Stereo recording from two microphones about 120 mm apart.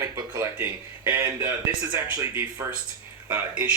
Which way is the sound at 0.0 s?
30° right (ahead or behind).